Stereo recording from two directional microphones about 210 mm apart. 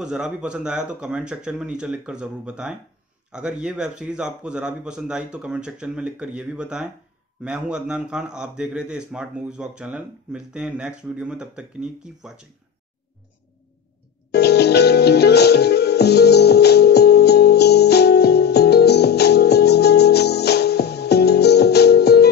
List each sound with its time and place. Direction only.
0.0 s a man's voice: 5° right (ahead or behind)
14.3 s music: 50° left (ahead or behind)